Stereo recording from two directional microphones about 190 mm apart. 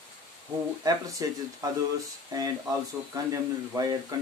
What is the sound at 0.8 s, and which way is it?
Speech, 20° right (ahead or behind).